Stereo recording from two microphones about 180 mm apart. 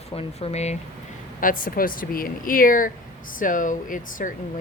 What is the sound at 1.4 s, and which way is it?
Speech, 50° left (ahead or behind).